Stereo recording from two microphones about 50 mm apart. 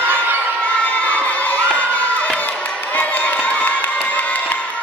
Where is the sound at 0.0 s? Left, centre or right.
Right.